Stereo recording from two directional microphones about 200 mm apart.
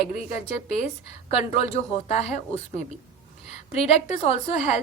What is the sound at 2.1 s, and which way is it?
Speech, 35° left (ahead or behind).